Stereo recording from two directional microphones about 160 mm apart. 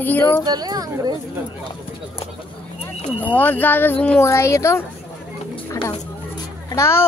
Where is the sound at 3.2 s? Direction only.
10° left (ahead or behind).